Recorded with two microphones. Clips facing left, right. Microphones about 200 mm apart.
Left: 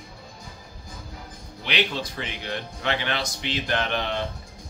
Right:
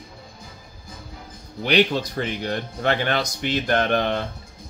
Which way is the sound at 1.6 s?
45° right (ahead or behind).